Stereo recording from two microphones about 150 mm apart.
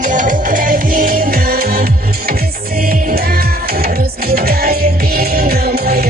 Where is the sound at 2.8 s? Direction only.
80° right.